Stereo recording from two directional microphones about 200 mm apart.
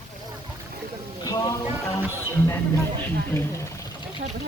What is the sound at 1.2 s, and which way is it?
Music, 20° left (ahead or behind).